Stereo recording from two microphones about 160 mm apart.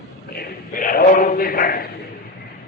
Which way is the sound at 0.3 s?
65° left (ahead or behind).